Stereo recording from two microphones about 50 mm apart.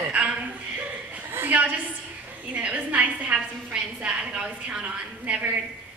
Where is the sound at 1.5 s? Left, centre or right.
Right.